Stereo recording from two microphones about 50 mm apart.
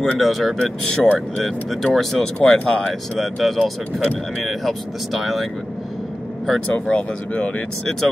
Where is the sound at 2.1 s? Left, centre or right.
Centre.